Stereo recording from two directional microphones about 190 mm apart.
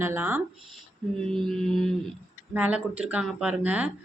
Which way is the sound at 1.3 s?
5° left (ahead or behind).